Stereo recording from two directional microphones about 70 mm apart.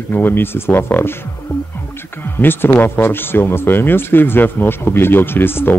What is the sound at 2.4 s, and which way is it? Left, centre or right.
Speech, left.